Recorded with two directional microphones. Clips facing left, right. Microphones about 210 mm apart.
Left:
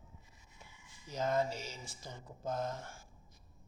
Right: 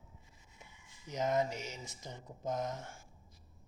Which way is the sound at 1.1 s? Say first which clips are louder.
Right 1 dB; 20° right (ahead or behind).